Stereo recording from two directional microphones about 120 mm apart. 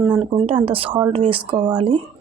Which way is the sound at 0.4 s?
50° right (ahead or behind).